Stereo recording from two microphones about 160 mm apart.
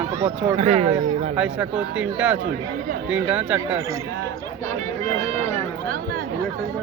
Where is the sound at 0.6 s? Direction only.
45° right (ahead or behind).